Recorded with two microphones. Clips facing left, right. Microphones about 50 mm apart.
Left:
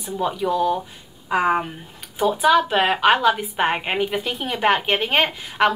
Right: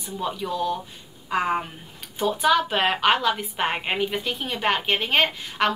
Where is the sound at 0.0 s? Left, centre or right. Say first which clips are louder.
Left 6 dB; centre.